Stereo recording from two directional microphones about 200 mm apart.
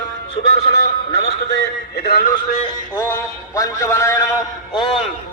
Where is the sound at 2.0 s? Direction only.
55° left (ahead or behind).